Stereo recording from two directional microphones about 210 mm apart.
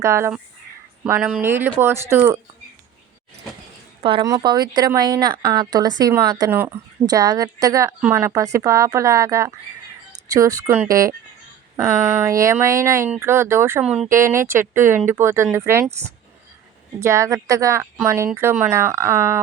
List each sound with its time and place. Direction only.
0.0 s speech: 15° right (ahead or behind)
4.0 s a woman's voice: 20° right (ahead or behind)